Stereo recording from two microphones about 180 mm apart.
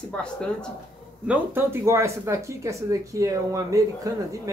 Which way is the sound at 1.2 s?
10° right (ahead or behind).